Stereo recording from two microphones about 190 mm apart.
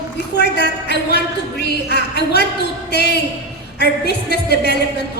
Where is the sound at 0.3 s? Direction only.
60° left (ahead or behind).